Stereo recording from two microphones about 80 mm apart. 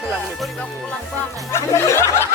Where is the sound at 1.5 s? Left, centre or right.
Left.